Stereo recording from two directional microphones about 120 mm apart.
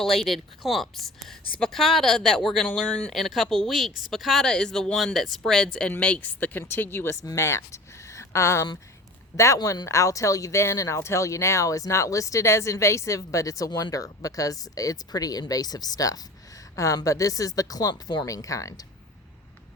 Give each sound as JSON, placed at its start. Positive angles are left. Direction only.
{"t": 0.0, "sound": "a woman's voice", "side_deg": 0}